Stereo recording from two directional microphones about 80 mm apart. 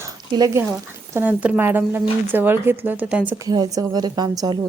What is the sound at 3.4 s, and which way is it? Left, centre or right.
Speech, right.